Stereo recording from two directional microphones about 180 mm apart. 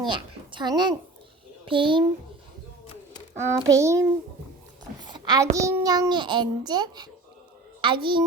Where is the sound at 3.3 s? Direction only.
15° right (ahead or behind).